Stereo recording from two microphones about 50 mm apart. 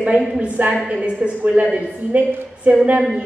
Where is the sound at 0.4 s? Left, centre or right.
Right.